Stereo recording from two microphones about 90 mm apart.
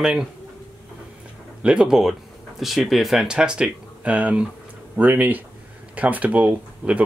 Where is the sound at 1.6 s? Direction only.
10° right (ahead or behind).